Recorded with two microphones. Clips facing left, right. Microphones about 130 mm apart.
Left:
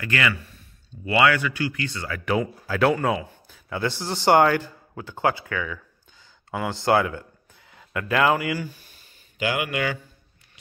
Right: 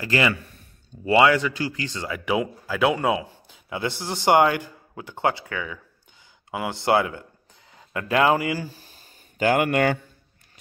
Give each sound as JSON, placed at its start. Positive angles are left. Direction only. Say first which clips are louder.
{"t": 0.0, "sound": "speech", "louder": "right 3 dB", "side_deg": -30}
{"t": 3.0, "sound": "speech", "louder": "right 1 dB", "side_deg": -15}